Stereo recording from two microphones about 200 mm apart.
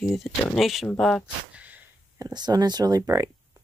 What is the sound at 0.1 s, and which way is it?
Speech, centre (ahead or behind).